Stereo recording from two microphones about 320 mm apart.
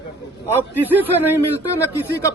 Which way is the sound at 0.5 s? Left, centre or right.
Centre.